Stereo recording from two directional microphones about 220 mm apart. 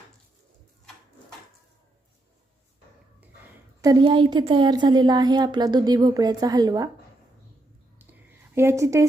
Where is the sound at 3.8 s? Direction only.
20° right (ahead or behind).